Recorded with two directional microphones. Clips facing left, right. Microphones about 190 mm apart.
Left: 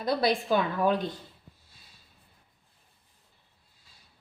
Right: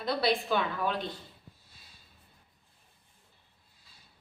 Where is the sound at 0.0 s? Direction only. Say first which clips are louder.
Left 3 dB; 45° left (ahead or behind).